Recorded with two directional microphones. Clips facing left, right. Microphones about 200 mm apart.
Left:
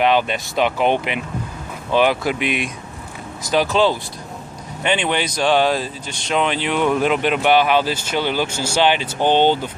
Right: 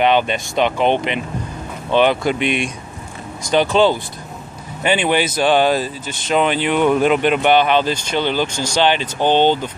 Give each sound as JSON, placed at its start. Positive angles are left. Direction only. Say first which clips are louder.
{"t": 0.0, "sound": "speech", "louder": "right 2 dB", "side_deg": 0}